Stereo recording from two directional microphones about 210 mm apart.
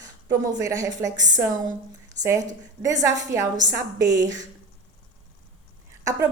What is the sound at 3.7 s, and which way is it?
Speech, 15° right (ahead or behind).